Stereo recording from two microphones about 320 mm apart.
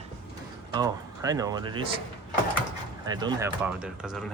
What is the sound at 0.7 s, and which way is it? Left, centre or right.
Speech, centre.